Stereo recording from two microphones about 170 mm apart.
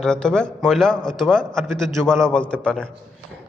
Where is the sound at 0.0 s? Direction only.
5° left (ahead or behind).